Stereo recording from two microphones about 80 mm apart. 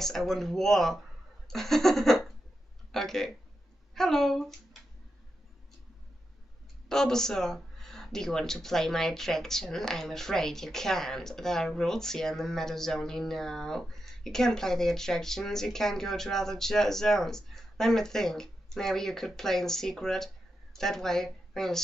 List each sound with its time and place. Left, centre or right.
0.0 s speech: centre
6.9 s a woman's voice: centre